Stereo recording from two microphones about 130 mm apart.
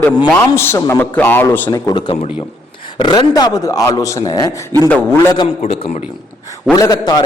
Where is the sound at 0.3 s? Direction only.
20° left (ahead or behind).